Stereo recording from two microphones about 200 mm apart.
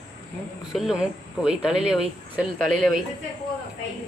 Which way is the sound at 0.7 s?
5° right (ahead or behind).